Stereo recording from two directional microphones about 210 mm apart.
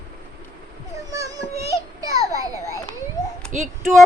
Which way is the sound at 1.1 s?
15° right (ahead or behind).